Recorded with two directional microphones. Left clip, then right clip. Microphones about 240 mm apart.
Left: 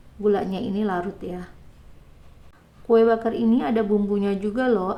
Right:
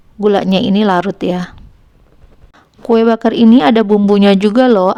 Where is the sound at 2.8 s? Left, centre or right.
Right.